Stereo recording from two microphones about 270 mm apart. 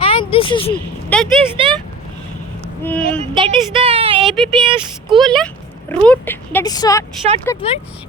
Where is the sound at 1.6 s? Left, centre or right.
Centre.